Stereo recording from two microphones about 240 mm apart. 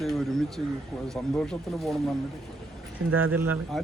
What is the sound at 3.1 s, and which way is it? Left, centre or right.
Speech, right.